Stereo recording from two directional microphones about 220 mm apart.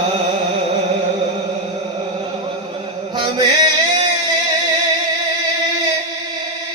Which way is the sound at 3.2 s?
20° right (ahead or behind).